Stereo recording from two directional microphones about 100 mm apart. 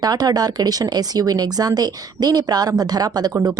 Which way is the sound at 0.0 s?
40° right (ahead or behind).